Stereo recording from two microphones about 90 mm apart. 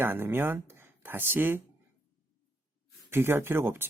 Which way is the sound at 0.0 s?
25° right (ahead or behind).